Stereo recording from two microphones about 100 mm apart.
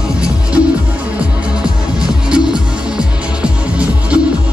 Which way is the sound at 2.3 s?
10° right (ahead or behind).